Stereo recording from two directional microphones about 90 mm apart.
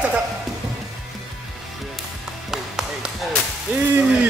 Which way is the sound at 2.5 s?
5° right (ahead or behind).